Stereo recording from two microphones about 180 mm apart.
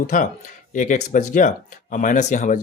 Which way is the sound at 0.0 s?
50° left (ahead or behind).